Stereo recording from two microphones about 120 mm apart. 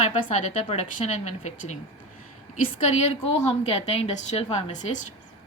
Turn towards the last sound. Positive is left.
turn(degrees=90)